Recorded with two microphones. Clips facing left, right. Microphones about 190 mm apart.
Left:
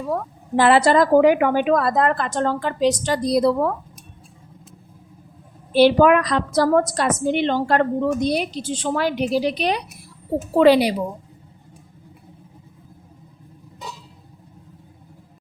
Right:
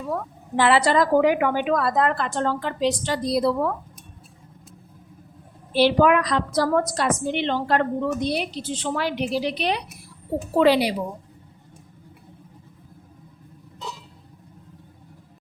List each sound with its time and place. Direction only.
0.5 s a woman's voice: 45° left (ahead or behind)
5.7 s a woman's voice: 50° left (ahead or behind)